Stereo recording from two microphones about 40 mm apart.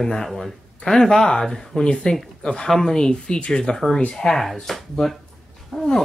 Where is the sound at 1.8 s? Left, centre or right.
Left.